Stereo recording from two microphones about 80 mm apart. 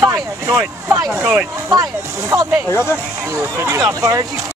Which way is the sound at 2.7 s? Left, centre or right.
Left.